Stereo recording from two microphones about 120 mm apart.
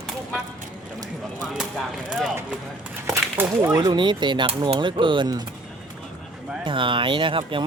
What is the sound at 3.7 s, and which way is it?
Speech, 35° right (ahead or behind).